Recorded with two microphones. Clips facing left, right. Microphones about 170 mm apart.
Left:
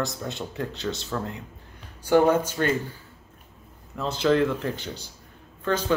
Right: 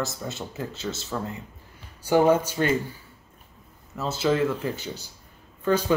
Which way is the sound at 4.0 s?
5° right (ahead or behind).